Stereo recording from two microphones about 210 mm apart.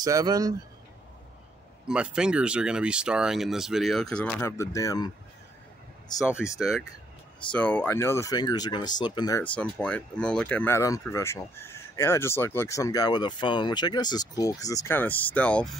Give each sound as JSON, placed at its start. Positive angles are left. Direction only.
{"t": 0.0, "sound": "speech", "side_deg": -20}
{"t": 1.9, "sound": "speech", "side_deg": -5}
{"t": 6.4, "sound": "speech", "side_deg": 0}
{"t": 9.4, "sound": "speech", "side_deg": 5}